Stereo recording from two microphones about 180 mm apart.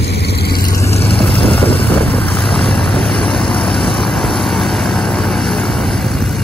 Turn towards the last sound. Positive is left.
turn(degrees=5)  # may be behind; listen again after turning